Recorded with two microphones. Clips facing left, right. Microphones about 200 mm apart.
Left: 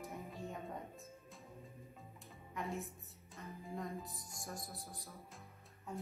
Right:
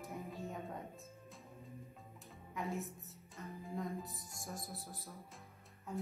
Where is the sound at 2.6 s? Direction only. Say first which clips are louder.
Right 2 dB; centre (ahead or behind).